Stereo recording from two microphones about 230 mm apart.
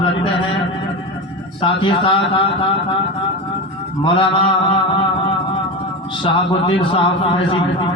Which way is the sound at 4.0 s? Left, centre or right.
Left.